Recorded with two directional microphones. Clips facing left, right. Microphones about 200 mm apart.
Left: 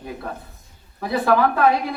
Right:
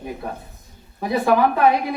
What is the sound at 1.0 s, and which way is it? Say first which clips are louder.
Speech: right 1 dB; 15° right (ahead or behind).